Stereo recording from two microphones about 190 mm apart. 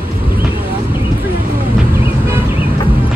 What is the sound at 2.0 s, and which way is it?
Music, 30° left (ahead or behind).